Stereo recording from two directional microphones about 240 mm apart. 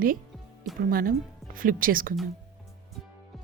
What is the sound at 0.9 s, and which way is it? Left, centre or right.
Speech, right.